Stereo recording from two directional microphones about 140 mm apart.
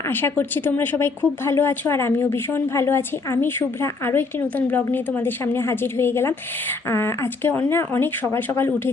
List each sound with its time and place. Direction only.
0.1 s a woman's voice: 15° left (ahead or behind)